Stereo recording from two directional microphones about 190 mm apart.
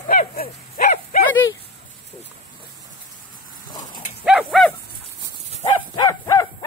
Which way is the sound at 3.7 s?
20° left (ahead or behind).